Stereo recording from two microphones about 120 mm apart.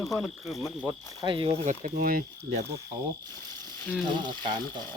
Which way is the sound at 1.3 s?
45° right (ahead or behind).